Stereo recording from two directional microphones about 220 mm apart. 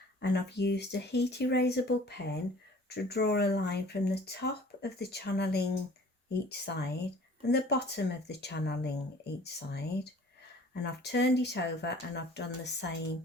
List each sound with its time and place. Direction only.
0.2 s speech: 50° left (ahead or behind)